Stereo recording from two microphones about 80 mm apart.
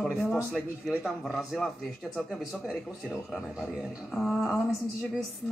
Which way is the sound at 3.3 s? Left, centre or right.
Centre.